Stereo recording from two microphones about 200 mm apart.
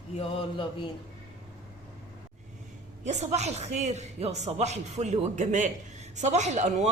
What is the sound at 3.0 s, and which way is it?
Speech, 35° right (ahead or behind).